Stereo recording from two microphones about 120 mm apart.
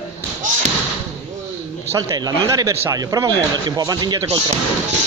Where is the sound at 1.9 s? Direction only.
30° right (ahead or behind).